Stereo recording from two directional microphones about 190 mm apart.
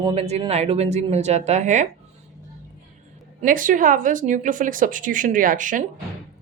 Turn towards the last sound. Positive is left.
turn(degrees=-45)  # may be behind; listen again after turning